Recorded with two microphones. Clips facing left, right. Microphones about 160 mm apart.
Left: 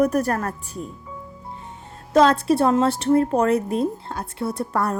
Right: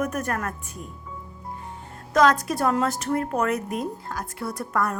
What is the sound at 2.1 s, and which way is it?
A woman's voice, 30° left (ahead or behind).